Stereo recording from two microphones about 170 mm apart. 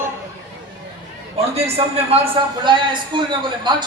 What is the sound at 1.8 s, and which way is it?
Speech, 35° right (ahead or behind).